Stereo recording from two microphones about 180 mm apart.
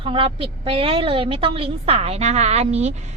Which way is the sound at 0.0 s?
30° right (ahead or behind).